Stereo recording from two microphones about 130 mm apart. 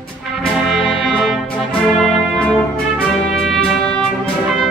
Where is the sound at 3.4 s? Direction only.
5° left (ahead or behind).